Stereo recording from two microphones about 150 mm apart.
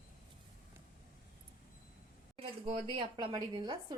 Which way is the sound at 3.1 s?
30° right (ahead or behind).